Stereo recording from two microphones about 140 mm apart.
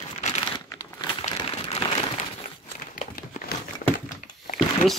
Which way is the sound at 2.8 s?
90° left.